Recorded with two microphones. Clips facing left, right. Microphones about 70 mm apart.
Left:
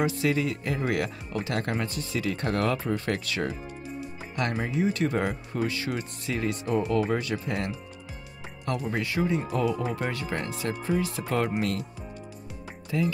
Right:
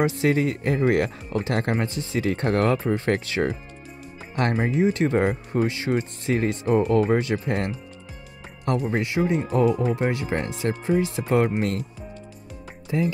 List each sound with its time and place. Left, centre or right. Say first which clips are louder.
0.0 s speech: right 4 dB; right
8.9 s speech: right 2 dB; right
9.9 s speech: right 6 dB; right
10.3 s speech: right 5 dB; right
12.9 s speech: right 3 dB; right